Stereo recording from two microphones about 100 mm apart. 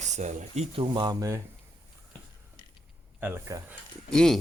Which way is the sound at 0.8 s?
50° right (ahead or behind).